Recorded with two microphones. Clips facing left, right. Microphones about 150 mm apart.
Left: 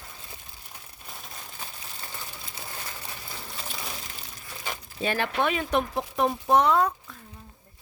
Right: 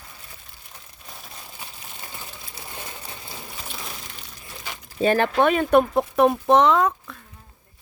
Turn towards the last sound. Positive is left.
turn(degrees=-90)